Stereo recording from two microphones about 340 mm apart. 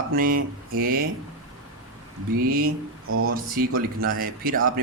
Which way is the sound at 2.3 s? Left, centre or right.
Right.